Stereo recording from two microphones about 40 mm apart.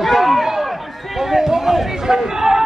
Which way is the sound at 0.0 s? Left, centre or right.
Centre.